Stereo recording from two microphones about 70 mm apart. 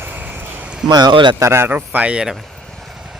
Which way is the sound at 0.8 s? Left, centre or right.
Right.